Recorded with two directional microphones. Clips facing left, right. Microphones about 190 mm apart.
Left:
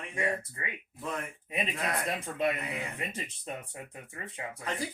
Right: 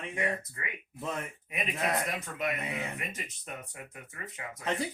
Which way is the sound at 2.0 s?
30° left (ahead or behind).